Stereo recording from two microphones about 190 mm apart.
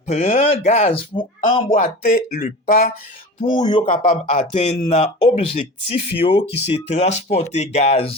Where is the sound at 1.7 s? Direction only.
45° left (ahead or behind).